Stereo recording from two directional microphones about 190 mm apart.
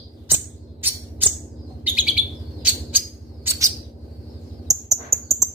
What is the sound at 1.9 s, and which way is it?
Bird, 5° right (ahead or behind).